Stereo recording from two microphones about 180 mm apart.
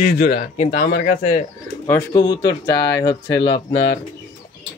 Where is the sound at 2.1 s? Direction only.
25° left (ahead or behind).